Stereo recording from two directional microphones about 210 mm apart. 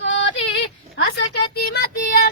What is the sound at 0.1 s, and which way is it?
Female singing, 60° left (ahead or behind).